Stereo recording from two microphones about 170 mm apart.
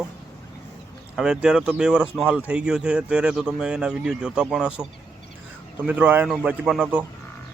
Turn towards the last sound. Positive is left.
turn(degrees=-5)  # may be behind; listen again after turning